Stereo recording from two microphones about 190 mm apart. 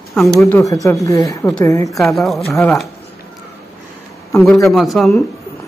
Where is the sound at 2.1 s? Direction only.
Centre (ahead or behind).